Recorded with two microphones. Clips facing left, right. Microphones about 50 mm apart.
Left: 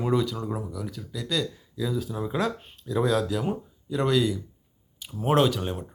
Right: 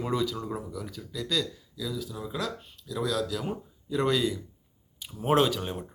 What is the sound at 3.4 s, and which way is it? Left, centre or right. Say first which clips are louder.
Speech: left 5 dB; centre.